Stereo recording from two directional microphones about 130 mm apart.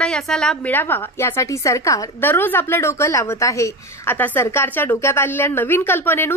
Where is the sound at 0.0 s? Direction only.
5° left (ahead or behind).